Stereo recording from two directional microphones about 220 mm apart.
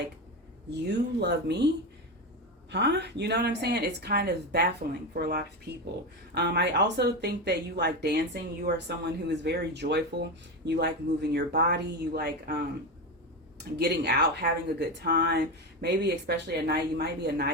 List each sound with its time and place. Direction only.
0.7 s speech: 50° right (ahead or behind)
13.7 s speech: 50° right (ahead or behind)